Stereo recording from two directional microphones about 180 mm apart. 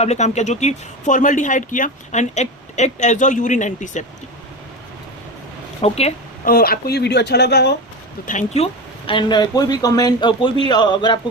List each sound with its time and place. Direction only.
0.0 s speech: 40° left (ahead or behind)
5.8 s speech: 35° left (ahead or behind)
6.4 s speech: 55° left (ahead or behind)
8.3 s speech: 40° left (ahead or behind)